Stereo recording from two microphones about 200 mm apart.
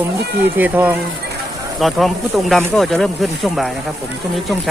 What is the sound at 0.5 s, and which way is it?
Speech, 10° right (ahead or behind).